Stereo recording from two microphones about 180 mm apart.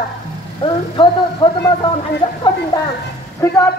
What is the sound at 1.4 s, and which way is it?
Speech, 25° left (ahead or behind).